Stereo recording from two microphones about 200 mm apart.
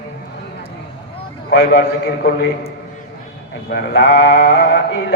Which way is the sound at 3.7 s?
55° left (ahead or behind).